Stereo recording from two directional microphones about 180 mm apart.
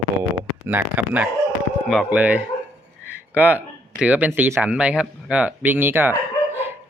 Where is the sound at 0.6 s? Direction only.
10° right (ahead or behind).